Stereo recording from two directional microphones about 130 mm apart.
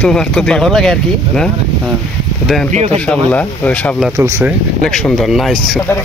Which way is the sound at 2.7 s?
60° right (ahead or behind).